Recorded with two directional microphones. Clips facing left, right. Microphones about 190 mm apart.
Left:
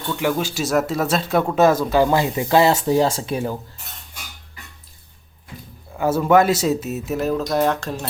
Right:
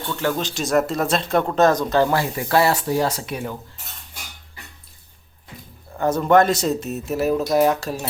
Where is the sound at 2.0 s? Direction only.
20° left (ahead or behind).